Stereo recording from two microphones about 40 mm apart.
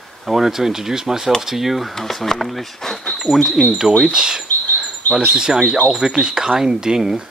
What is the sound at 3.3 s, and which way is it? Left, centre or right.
Speech, centre.